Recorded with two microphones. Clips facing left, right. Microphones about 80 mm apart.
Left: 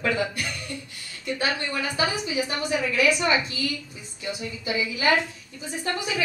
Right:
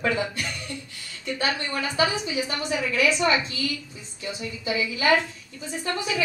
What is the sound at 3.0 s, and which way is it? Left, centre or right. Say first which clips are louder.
Speech: right 2 dB; right.